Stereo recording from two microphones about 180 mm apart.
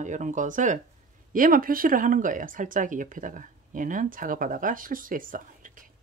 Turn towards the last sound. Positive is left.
turn(degrees=-50)  # may be behind; listen again after turning